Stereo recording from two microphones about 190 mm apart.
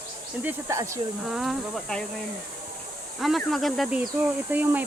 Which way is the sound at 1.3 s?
Centre (ahead or behind).